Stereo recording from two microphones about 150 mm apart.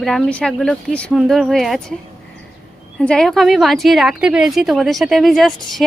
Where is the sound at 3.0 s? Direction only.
5° left (ahead or behind).